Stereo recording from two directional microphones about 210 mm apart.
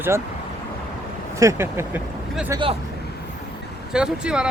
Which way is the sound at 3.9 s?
5° right (ahead or behind).